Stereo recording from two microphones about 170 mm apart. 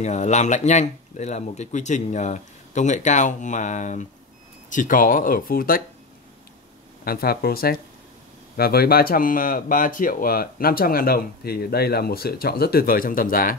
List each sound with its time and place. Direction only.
0.0 s speech: 45° left (ahead or behind); by 5.8 s 60° left (ahead or behind)
7.1 s speech: 65° left (ahead or behind)